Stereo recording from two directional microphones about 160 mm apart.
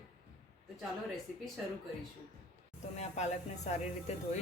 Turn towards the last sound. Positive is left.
turn(degrees=45)  # may be behind; listen again after turning